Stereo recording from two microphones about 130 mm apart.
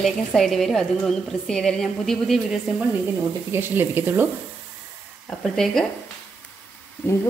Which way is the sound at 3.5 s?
15° right (ahead or behind).